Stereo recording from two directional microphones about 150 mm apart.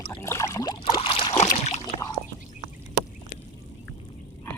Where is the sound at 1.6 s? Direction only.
50° left (ahead or behind).